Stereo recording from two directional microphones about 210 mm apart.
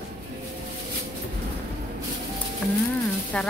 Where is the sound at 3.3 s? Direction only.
5° left (ahead or behind).